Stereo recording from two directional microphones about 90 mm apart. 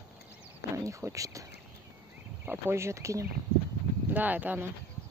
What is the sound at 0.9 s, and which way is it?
Speech, 35° right (ahead or behind).